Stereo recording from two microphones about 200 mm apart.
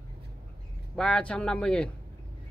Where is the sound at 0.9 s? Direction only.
5° left (ahead or behind).